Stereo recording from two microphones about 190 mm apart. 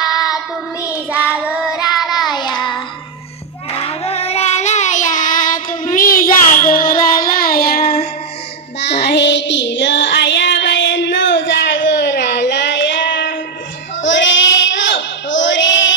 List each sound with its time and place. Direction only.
0.1 s child singing: 20° left (ahead or behind)
1.4 s child singing: 5° right (ahead or behind)
2.3 s child singing: 25° left (ahead or behind); by 7.9 s 50° left (ahead or behind)
9.0 s child singing: 65° left (ahead or behind)